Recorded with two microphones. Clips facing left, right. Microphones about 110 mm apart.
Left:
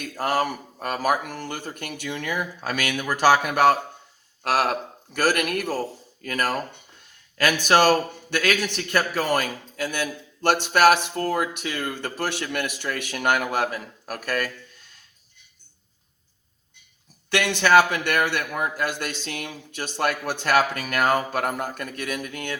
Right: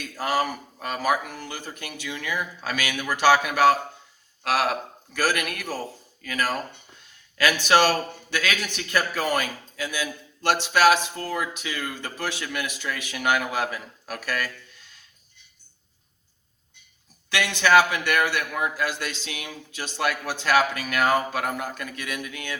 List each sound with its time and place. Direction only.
0.0 s a man's voice: 50° left (ahead or behind)
17.3 s a man's voice: 50° left (ahead or behind)